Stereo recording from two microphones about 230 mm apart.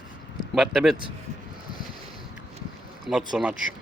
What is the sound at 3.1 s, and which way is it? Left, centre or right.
Speech, centre.